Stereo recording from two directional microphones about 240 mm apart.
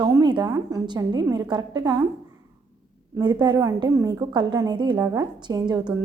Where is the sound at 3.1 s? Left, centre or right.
Centre.